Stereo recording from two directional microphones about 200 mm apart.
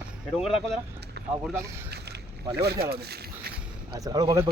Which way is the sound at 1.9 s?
55° right (ahead or behind).